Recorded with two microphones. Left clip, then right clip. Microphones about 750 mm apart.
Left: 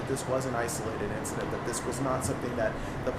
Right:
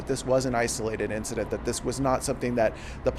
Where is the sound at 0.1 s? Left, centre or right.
Right.